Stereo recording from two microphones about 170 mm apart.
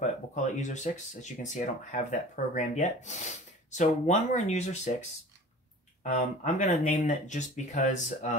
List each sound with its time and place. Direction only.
0.0 s speech: 45° left (ahead or behind)
6.0 s speech: 45° left (ahead or behind)